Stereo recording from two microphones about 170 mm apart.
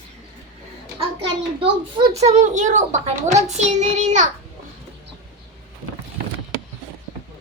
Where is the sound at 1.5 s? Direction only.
35° right (ahead or behind).